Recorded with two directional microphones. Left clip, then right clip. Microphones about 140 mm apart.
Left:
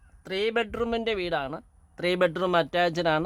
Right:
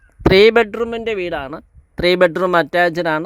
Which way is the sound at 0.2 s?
65° right (ahead or behind).